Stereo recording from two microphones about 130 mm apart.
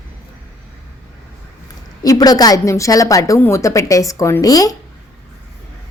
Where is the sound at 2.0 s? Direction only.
30° left (ahead or behind).